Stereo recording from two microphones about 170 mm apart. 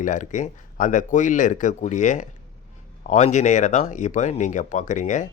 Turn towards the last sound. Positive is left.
turn(degrees=45)  # may be behind; listen again after turning